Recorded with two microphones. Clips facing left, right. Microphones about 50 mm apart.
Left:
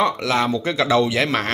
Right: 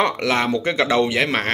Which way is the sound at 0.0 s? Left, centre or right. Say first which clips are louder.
Even; right.